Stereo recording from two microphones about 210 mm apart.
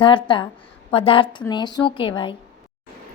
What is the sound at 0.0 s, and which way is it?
A woman's voice, 25° left (ahead or behind).